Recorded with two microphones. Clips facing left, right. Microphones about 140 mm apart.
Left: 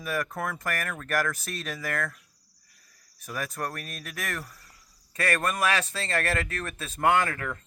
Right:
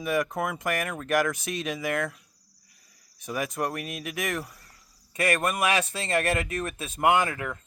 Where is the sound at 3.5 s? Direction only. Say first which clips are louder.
Right 4 dB; 15° right (ahead or behind).